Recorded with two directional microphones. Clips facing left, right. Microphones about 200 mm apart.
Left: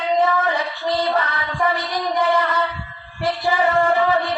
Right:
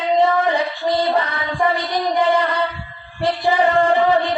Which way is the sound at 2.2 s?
15° right (ahead or behind).